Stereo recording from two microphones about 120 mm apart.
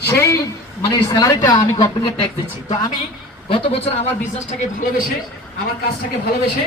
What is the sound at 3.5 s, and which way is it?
Speech, 55° left (ahead or behind).